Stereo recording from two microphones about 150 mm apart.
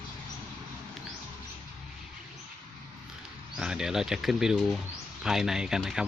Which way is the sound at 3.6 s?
5° right (ahead or behind).